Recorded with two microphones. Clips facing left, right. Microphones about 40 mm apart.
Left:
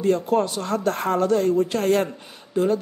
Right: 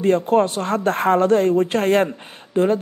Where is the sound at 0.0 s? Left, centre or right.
Right.